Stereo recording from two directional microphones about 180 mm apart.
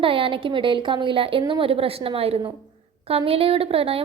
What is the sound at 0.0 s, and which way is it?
A woman's voice, 30° right (ahead or behind).